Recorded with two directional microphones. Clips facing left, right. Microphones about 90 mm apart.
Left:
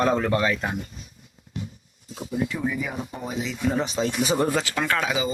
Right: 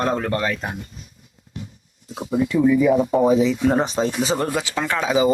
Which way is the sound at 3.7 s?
35° right (ahead or behind).